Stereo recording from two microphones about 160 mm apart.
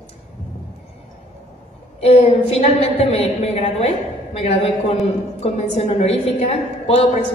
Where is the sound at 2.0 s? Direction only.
40° left (ahead or behind).